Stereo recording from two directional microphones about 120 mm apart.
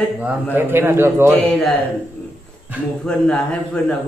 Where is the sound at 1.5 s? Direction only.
10° left (ahead or behind).